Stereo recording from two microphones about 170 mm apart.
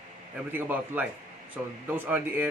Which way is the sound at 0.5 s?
10° right (ahead or behind).